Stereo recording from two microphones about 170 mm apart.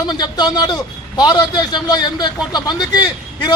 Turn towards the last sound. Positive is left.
turn(degrees=25)  # may be behind; listen again after turning